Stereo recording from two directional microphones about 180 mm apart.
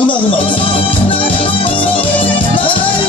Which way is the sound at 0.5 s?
30° left (ahead or behind).